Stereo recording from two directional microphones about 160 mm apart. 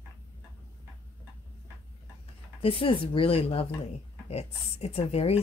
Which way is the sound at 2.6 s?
35° left (ahead or behind).